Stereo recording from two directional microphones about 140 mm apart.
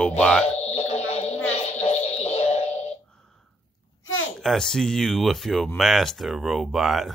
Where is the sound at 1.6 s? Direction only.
50° left (ahead or behind).